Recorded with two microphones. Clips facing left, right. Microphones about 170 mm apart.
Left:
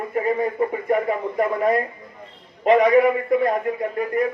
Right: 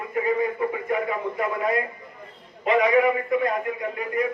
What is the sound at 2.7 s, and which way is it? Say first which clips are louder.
Speech: left 4 dB; 40° left (ahead or behind).